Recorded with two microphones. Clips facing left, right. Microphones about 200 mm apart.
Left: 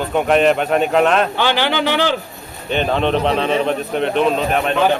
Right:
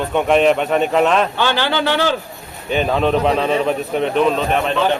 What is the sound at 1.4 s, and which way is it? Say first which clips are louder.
Speech: left 1 dB; 15° left (ahead or behind).